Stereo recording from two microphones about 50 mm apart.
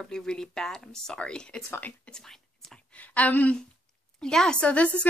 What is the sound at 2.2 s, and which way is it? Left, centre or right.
Whispering, centre.